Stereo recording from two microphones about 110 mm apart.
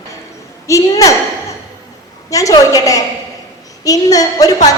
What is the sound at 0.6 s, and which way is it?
Speech, 30° left (ahead or behind).